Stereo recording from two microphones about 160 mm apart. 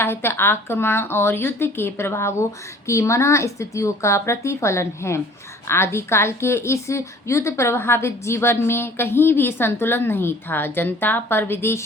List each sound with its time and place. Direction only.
0.0 s a woman's voice: 15° left (ahead or behind)